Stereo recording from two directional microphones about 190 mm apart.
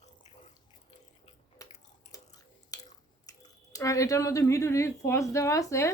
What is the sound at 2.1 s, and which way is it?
Chewing, 20° left (ahead or behind).